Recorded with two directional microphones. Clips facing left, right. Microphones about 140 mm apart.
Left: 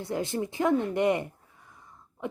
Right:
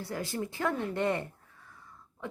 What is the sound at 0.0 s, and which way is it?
Speech, 20° left (ahead or behind).